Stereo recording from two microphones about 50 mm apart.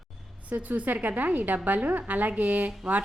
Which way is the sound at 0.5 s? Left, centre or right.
Right.